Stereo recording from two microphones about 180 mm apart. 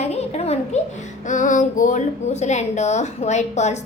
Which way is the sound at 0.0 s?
35° left (ahead or behind).